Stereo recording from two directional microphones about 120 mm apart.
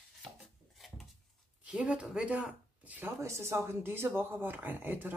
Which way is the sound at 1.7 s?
10° right (ahead or behind).